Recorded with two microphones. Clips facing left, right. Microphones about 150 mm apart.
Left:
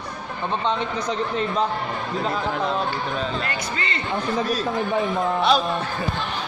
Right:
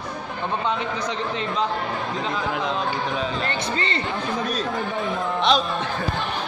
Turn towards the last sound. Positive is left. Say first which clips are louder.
# left 1 dB
turn(degrees=5)  # may be behind; listen again after turning